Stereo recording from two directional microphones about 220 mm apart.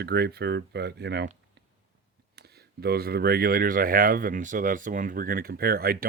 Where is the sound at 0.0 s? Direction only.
45° right (ahead or behind).